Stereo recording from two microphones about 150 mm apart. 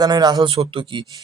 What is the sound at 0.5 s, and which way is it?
Speech, 40° right (ahead or behind).